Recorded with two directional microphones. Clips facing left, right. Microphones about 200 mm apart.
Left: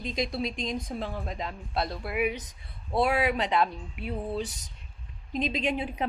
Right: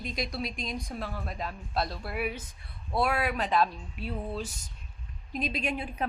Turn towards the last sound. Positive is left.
turn(degrees=20)  # may be behind; listen again after turning